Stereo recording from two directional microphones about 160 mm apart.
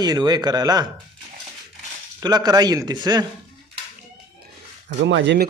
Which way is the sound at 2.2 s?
25° right (ahead or behind).